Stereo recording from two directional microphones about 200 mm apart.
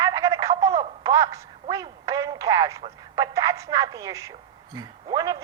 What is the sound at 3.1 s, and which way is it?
A woman's voice, 15° right (ahead or behind).